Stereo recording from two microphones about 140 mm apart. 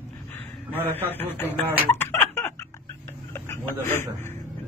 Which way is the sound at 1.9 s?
15° left (ahead or behind).